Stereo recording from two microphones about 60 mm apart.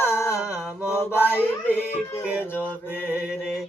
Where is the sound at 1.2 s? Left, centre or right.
Left.